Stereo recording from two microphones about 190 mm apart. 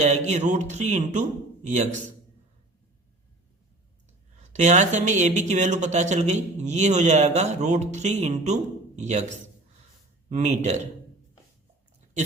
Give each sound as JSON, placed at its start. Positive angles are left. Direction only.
{"t": 0.3, "sound": "speech", "side_deg": -40}
{"t": 4.5, "sound": "a man's voice", "side_deg": -40}
{"t": 10.2, "sound": "speech", "side_deg": -40}